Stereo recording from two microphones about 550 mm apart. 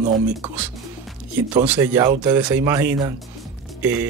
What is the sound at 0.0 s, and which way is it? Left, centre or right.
Speech, centre.